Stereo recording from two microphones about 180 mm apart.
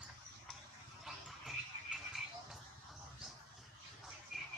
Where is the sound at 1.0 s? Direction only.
Centre (ahead or behind).